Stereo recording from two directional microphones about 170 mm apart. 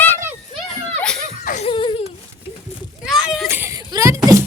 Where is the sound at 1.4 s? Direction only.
45° left (ahead or behind).